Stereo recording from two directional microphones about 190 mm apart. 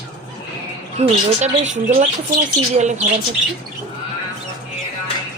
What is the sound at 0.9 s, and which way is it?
Speech, 40° right (ahead or behind).